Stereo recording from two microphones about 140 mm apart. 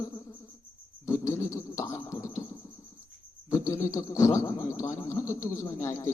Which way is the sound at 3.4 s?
20° left (ahead or behind).